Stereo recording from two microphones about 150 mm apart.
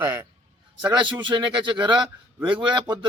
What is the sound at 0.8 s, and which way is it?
A man's voice, 30° right (ahead or behind).